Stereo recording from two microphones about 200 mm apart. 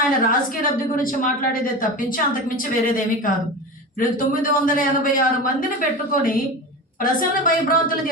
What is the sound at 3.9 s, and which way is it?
A woman's voice, 45° left (ahead or behind).